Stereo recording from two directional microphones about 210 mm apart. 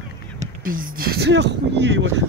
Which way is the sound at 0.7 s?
40° right (ahead or behind).